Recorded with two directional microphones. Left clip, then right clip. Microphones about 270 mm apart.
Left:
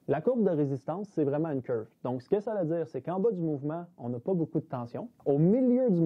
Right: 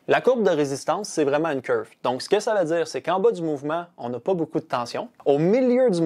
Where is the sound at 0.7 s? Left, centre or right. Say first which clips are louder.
Right 9 dB; centre.